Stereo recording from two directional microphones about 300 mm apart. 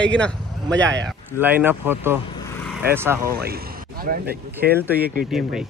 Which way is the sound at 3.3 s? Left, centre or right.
Right.